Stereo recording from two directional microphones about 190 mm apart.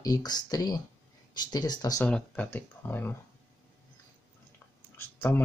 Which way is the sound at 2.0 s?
5° left (ahead or behind).